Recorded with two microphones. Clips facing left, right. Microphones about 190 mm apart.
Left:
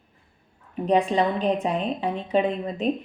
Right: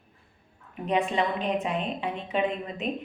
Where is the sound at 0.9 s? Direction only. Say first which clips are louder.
Left 5 dB; 35° left (ahead or behind).